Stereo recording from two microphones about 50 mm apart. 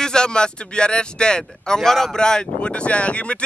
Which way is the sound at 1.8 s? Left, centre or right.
Centre.